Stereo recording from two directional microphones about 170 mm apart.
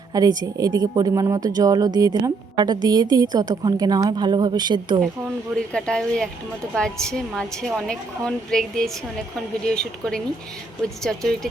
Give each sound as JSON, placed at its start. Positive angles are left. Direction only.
{"t": 0.1, "sound": "speech", "side_deg": -20}
{"t": 5.5, "sound": "a woman's voice", "side_deg": 5}